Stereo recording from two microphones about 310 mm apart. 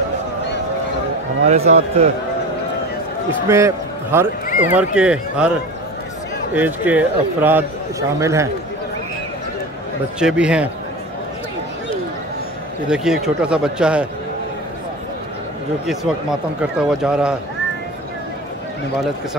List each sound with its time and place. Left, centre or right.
1.4 s a man's voice: right
3.4 s a man's voice: centre
6.5 s a man's voice: centre
10.1 s speech: centre
12.8 s speech: centre
15.9 s speech: centre